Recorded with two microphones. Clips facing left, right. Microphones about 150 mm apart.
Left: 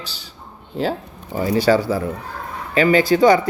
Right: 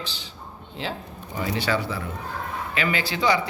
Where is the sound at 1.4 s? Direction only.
40° left (ahead or behind).